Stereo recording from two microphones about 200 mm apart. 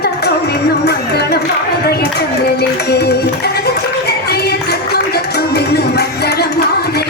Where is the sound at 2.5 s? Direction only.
55° left (ahead or behind).